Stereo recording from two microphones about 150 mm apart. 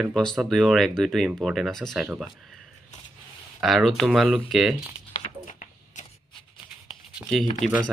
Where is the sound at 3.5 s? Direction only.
Centre (ahead or behind).